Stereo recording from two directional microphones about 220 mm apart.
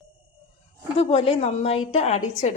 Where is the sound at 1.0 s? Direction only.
30° left (ahead or behind).